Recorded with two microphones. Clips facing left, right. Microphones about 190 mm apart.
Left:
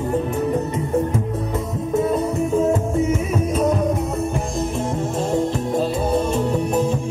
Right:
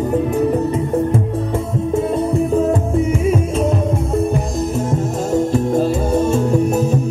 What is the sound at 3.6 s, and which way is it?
Music, 25° right (ahead or behind).